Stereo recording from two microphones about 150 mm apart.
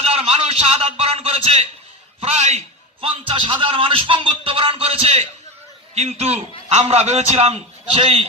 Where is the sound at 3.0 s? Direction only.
35° right (ahead or behind).